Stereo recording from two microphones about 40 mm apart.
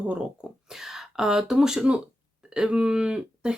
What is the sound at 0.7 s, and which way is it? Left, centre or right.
Speech, centre.